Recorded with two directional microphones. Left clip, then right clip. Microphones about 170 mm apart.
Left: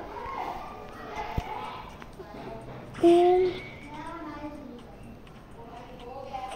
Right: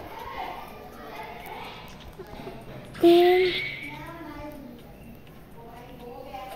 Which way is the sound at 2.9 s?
5° right (ahead or behind).